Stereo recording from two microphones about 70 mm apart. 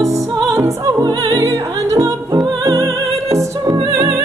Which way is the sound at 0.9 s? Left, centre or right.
Right.